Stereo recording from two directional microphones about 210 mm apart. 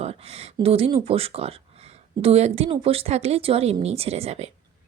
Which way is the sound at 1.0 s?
30° right (ahead or behind).